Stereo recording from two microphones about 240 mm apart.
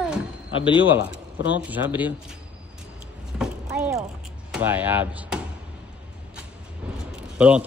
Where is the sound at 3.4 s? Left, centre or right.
Centre.